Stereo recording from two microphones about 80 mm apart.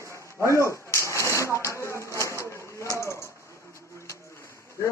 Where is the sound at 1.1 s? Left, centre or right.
Left.